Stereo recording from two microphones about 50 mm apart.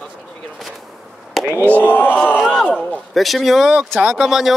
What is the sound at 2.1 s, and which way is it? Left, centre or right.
Battle cry, left.